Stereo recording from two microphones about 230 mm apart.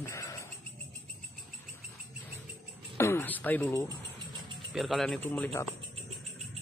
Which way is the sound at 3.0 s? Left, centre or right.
Centre.